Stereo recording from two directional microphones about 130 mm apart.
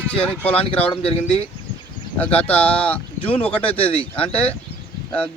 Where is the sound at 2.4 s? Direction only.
10° left (ahead or behind).